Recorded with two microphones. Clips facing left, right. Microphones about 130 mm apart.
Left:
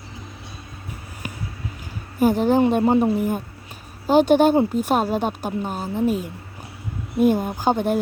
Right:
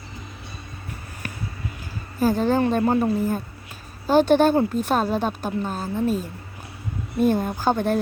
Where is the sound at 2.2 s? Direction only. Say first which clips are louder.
Left 3 dB; 15° left (ahead or behind).